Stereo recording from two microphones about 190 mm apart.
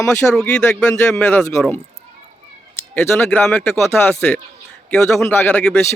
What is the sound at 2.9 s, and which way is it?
Speech, 10° left (ahead or behind).